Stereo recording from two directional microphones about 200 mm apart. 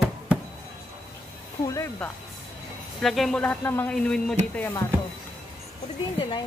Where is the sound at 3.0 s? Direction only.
Centre (ahead or behind).